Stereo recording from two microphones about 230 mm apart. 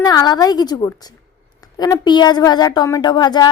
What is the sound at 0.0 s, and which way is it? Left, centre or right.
A woman's voice, centre.